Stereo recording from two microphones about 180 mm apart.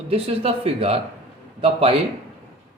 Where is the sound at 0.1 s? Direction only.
35° right (ahead or behind).